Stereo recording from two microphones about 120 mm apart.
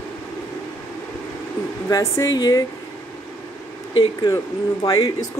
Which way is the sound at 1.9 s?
25° left (ahead or behind).